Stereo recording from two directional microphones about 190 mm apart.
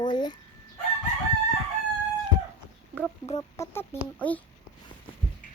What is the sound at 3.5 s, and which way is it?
Speech, 10° left (ahead or behind).